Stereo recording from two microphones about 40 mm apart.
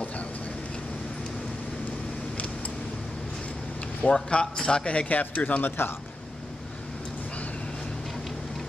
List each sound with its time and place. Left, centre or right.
4.1 s a man's voice: left
5.0 s speech: left
5.6 s speech: left